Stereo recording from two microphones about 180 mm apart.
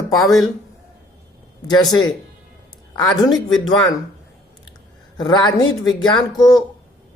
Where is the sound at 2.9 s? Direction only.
20° left (ahead or behind).